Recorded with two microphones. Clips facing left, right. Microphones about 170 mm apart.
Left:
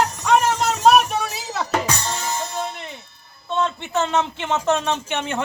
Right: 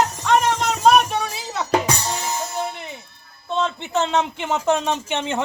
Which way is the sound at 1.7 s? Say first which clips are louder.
Right 4 dB; 10° right (ahead or behind).